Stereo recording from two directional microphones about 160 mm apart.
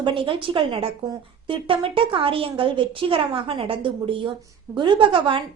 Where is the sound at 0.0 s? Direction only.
30° right (ahead or behind).